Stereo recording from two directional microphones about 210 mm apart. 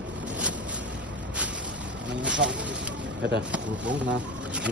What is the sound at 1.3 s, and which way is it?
Vehicle, 5° right (ahead or behind).